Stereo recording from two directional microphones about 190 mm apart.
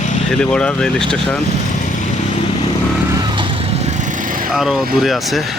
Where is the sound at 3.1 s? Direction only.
20° right (ahead or behind); by 4.5 s 45° right (ahead or behind).